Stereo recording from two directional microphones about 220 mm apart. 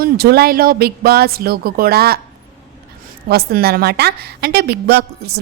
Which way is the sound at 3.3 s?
45° right (ahead or behind).